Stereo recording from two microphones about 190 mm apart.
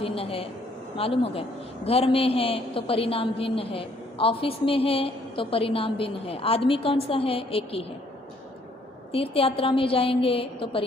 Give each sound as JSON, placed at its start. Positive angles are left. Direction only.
{"t": 0.0, "sound": "a man's voice", "side_deg": 30}
{"t": 9.1, "sound": "a man's voice", "side_deg": 30}